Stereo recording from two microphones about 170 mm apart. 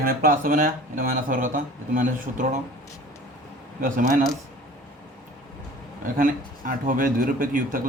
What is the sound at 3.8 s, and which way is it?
Speech, 50° right (ahead or behind).